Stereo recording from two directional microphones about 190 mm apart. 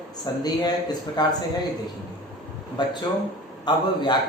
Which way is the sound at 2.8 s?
25° left (ahead or behind).